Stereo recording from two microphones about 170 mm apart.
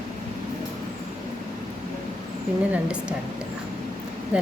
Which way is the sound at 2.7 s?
5° right (ahead or behind).